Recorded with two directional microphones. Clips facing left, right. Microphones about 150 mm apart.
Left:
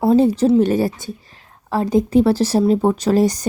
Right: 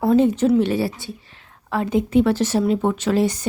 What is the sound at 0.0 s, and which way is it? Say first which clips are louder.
Speech: left 2 dB; 30° left (ahead or behind).